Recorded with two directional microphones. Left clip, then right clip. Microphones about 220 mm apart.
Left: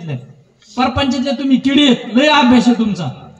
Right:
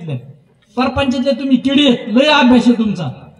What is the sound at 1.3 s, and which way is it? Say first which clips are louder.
A man's voice: left 1 dB; 50° right (ahead or behind).